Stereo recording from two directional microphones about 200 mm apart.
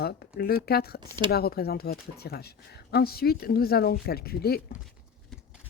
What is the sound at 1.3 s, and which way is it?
Speech, 50° left (ahead or behind).